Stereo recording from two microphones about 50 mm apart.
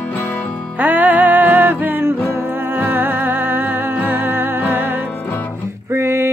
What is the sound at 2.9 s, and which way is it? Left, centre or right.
Music, right.